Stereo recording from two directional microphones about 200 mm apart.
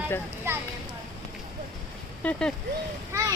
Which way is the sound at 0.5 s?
15° right (ahead or behind).